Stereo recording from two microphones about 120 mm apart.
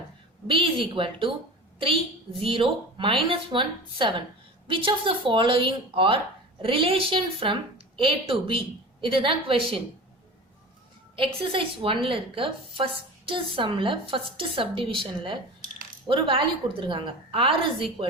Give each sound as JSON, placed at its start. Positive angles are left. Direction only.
{"t": 0.4, "sound": "a woman's voice", "side_deg": -45}
{"t": 11.2, "sound": "a woman's voice", "side_deg": -50}